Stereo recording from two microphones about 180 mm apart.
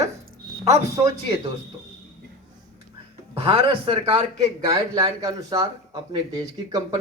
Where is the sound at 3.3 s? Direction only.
30° right (ahead or behind).